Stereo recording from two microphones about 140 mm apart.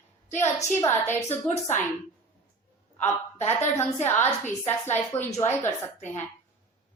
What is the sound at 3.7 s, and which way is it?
A woman's voice, 15° left (ahead or behind).